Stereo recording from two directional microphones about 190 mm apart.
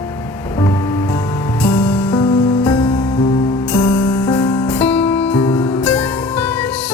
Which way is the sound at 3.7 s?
5° left (ahead or behind).